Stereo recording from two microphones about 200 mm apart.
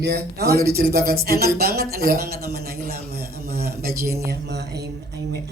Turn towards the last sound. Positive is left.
turn(degrees=-55)  # may be behind; listen again after turning